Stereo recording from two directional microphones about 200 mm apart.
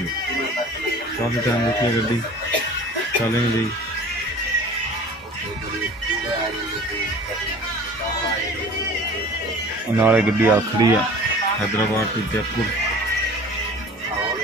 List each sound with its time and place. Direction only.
9.9 s speech: 10° right (ahead or behind)
10.8 s speech: 20° right (ahead or behind)